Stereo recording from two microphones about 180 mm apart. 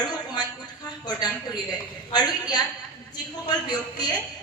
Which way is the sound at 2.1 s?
25° left (ahead or behind).